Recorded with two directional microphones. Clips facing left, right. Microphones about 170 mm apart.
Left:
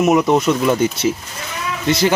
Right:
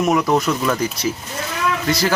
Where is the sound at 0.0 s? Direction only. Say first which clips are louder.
Left 3 dB; 20° left (ahead or behind).